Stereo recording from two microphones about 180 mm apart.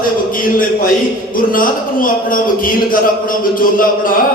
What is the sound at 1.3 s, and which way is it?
A man's voice, 50° left (ahead or behind).